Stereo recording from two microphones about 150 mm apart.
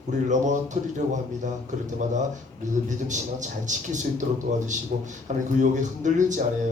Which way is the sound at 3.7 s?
55° right (ahead or behind).